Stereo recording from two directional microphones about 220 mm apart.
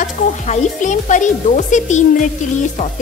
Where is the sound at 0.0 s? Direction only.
35° left (ahead or behind).